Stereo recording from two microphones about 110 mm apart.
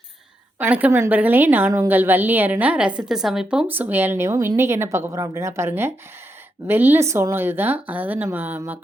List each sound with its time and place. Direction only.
0.6 s a woman's voice: 15° right (ahead or behind)
3.7 s a woman's voice: 15° right (ahead or behind)